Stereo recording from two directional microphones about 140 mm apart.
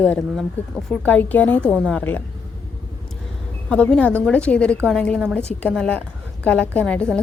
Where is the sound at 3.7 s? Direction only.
10° left (ahead or behind).